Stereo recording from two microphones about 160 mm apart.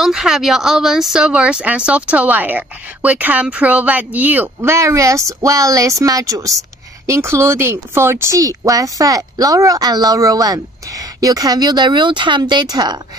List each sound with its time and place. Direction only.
0.0 s speech: 5° right (ahead or behind); by 13.0 s 25° right (ahead or behind)